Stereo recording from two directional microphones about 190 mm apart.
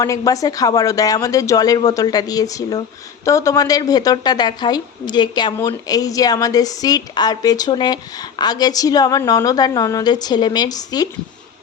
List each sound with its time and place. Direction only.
0.0 s a woman's voice: 15° left (ahead or behind)